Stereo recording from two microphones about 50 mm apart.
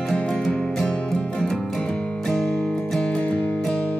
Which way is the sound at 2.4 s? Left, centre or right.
Left.